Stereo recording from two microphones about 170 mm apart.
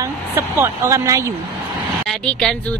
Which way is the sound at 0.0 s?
15° right (ahead or behind).